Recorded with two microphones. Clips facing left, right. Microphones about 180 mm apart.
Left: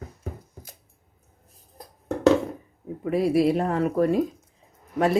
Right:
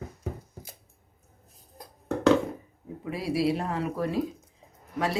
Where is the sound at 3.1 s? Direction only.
50° left (ahead or behind).